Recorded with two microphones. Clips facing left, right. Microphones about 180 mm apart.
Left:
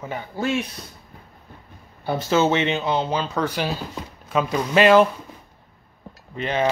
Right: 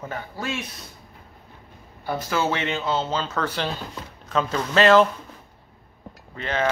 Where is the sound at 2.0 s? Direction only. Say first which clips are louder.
Left 5 dB; 25° left (ahead or behind); by 5.1 s 10° left (ahead or behind).